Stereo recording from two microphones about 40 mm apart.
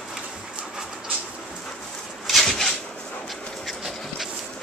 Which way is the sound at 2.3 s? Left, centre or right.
Centre.